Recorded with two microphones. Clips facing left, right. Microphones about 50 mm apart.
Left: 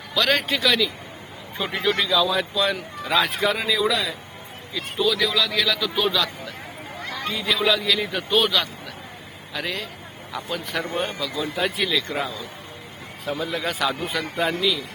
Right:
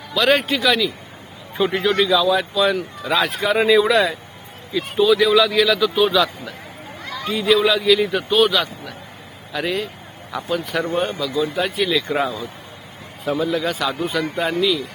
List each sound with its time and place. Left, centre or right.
0.1 s speech: centre
3.6 s speech: right
4.7 s speech: centre
12.0 s speech: centre
13.2 s speech: centre